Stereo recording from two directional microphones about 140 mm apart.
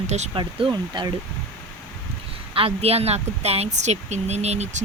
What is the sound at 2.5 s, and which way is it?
A woman's voice, 45° right (ahead or behind).